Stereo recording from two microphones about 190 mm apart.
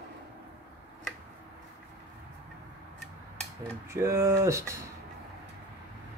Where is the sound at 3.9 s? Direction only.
15° right (ahead or behind).